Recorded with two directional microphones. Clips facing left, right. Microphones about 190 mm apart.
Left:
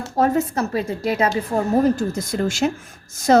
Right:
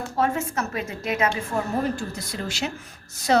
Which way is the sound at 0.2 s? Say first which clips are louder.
Left 6 dB; 35° left (ahead or behind).